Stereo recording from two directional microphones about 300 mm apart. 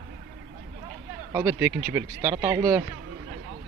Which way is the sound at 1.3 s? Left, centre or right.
Centre.